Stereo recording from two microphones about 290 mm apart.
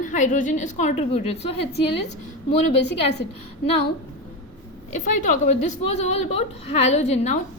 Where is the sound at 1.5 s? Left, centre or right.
Left.